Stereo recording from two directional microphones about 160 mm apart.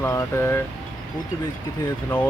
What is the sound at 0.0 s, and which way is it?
Speech, 15° left (ahead or behind).